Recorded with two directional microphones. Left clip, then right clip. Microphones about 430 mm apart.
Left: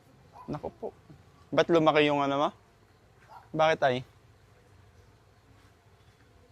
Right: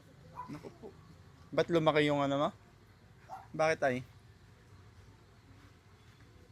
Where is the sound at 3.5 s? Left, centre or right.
Left.